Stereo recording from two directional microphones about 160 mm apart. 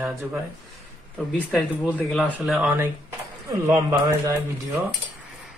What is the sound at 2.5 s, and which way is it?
Speech, 15° right (ahead or behind).